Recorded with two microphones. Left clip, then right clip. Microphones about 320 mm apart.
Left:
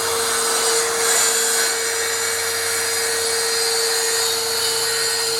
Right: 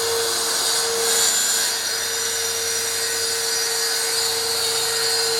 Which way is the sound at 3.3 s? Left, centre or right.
Centre.